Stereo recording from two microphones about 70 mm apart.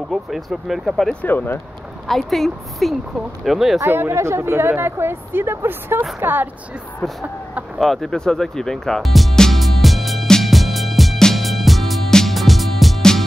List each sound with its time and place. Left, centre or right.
0.1 s speech: centre
1.2 s speech: left
2.0 s speech: centre
3.8 s speech: right
7.0 s speech: centre
7.8 s music: centre